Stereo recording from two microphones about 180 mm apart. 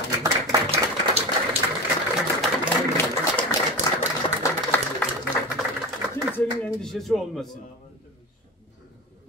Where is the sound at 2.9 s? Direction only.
15° left (ahead or behind).